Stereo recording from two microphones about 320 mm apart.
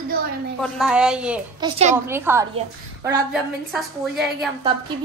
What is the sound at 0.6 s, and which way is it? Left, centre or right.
A woman's voice, centre.